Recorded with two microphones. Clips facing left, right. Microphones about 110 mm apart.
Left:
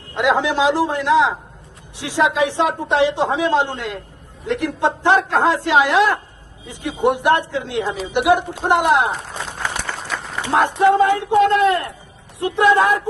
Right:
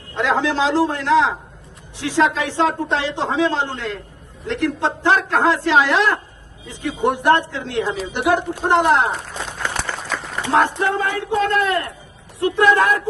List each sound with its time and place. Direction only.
0.2 s a man's voice: 15° left (ahead or behind)
10.4 s a man's voice: 15° left (ahead or behind)